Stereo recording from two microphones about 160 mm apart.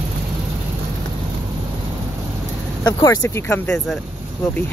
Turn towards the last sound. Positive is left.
turn(degrees=0)  # may be behind; listen again after turning